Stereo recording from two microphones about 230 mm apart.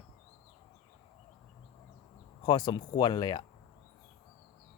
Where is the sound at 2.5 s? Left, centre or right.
Centre.